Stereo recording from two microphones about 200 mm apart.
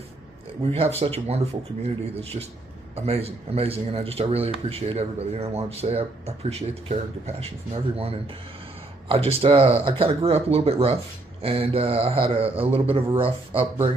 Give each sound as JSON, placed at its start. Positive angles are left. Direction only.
{"t": 0.6, "sound": "speech", "side_deg": -30}
{"t": 2.9, "sound": "speech", "side_deg": -30}